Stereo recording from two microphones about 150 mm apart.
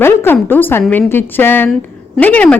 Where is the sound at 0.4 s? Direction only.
15° left (ahead or behind).